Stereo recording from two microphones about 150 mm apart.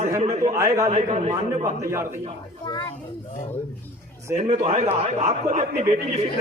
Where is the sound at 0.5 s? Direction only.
20° right (ahead or behind).